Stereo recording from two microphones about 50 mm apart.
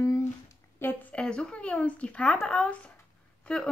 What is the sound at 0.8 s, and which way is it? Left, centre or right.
Speech, left.